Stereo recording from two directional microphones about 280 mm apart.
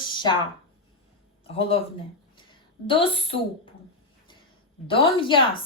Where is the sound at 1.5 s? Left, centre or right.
Centre.